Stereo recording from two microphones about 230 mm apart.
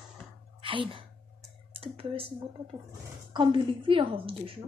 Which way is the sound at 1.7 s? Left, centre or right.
Right.